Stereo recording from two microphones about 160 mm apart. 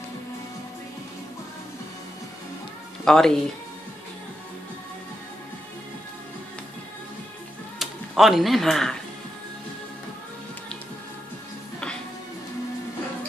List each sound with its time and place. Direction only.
3.1 s speech: 5° left (ahead or behind)
7.8 s speech: centre (ahead or behind)